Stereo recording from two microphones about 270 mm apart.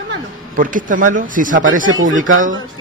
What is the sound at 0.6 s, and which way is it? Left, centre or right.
Speech, right.